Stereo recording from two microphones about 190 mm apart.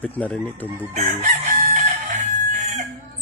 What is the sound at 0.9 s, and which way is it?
Chicken, 35° right (ahead or behind).